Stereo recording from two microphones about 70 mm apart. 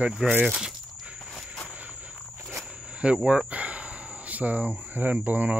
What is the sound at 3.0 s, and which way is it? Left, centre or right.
Speech, centre.